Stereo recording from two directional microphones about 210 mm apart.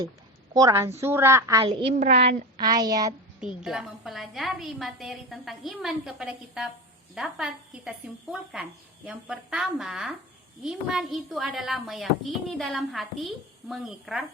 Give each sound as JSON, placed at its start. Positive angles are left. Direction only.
{"t": 0.5, "sound": "a woman's voice", "side_deg": -15}
{"t": 3.4, "sound": "a woman's voice", "side_deg": -5}